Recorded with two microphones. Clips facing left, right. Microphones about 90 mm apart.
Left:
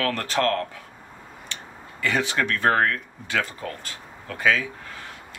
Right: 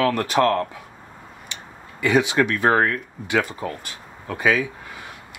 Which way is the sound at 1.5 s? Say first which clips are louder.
Even; 15° right (ahead or behind).